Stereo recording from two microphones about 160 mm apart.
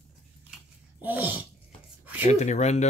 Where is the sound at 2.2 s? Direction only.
45° left (ahead or behind).